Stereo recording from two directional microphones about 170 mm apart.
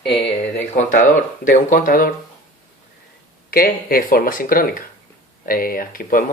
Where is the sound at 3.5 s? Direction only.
60° left (ahead or behind).